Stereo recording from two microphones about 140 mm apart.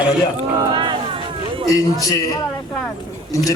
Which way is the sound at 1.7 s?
25° left (ahead or behind).